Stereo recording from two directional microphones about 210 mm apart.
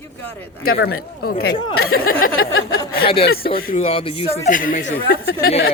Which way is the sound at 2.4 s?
75° left (ahead or behind).